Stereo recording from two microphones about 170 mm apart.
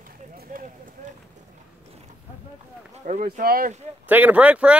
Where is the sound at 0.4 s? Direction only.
55° right (ahead or behind).